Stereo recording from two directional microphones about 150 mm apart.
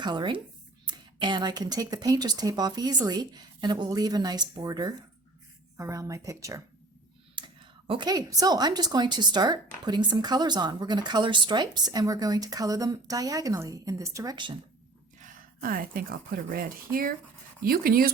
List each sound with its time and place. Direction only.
0.0 s a woman's voice: 30° right (ahead or behind)
7.3 s a woman's voice: 35° right (ahead or behind)
15.6 s speech: 70° right (ahead or behind)